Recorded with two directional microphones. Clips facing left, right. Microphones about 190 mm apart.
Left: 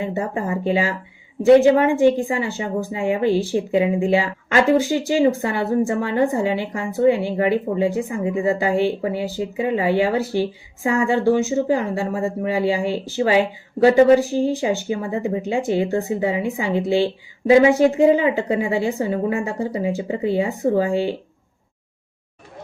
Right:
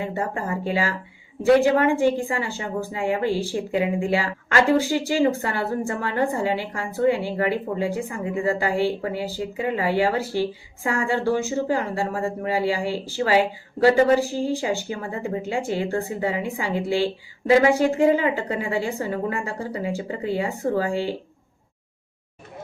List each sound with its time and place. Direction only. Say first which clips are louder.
0.0 s a woman's voice: left 3 dB; 20° left (ahead or behind)